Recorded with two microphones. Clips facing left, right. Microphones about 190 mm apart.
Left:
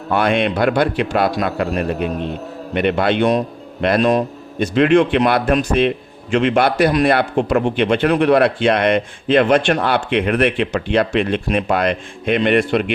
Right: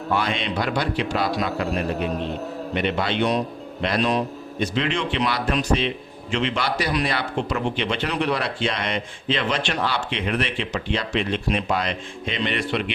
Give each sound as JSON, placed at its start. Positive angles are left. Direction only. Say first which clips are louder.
{"t": 0.1, "sound": "a man's voice", "louder": "left 8 dB", "side_deg": 60}
{"t": 2.7, "sound": "a man's voice", "louder": "left 7 dB", "side_deg": 60}